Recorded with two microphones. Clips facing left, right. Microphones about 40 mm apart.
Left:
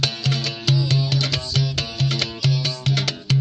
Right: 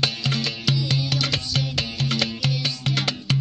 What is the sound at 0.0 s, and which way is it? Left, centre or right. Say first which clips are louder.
Music: even; right.